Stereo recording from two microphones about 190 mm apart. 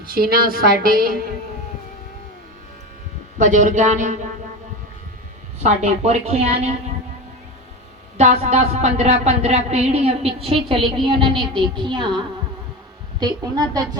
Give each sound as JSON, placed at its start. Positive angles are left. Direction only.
{"t": 0.0, "sound": "a woman's voice", "side_deg": -50}
{"t": 3.3, "sound": "speech", "side_deg": -40}
{"t": 5.6, "sound": "speech", "side_deg": -35}
{"t": 8.2, "sound": "speech", "side_deg": -35}
{"t": 10.8, "sound": "a woman's voice", "side_deg": 0}
{"t": 11.0, "sound": "a woman's voice", "side_deg": -25}